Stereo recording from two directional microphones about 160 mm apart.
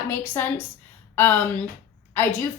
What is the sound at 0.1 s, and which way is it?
A woman's voice, 10° left (ahead or behind).